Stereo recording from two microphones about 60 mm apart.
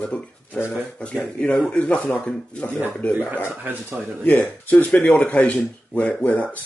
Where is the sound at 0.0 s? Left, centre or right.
Left.